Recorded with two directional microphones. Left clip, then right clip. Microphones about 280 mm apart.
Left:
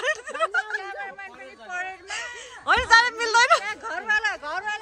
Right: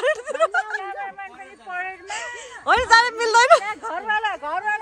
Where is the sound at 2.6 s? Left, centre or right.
Centre.